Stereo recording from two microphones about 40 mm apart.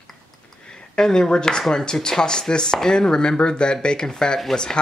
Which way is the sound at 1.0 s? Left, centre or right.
Centre.